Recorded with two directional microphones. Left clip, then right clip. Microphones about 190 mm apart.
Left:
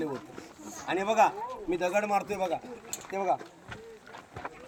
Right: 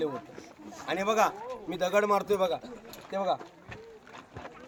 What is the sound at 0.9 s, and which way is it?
Speech, 5° right (ahead or behind).